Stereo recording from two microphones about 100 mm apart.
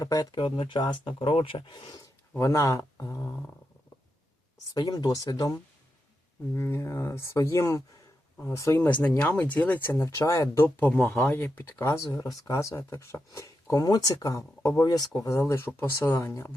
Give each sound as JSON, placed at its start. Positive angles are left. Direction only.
{"t": 0.0, "sound": "speech", "side_deg": 40}
{"t": 2.4, "sound": "speech", "side_deg": 30}
{"t": 4.7, "sound": "speech", "side_deg": 45}
{"t": 6.5, "sound": "speech", "side_deg": 25}
{"t": 8.9, "sound": "speech", "side_deg": 15}
{"t": 10.0, "sound": "speech", "side_deg": 35}
{"t": 10.8, "sound": "speech", "side_deg": 15}